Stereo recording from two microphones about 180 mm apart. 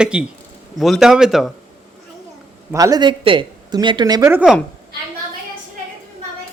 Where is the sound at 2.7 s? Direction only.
20° right (ahead or behind).